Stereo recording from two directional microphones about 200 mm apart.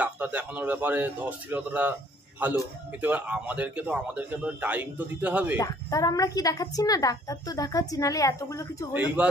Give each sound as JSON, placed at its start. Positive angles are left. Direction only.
{"t": 0.0, "sound": "a man's voice", "side_deg": -5}
{"t": 3.0, "sound": "a man's voice", "side_deg": -10}
{"t": 5.6, "sound": "a woman's voice", "side_deg": 15}
{"t": 8.9, "sound": "a man's voice", "side_deg": -5}